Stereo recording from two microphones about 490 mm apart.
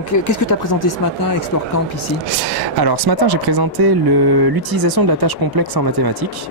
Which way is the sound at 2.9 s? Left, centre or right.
Right.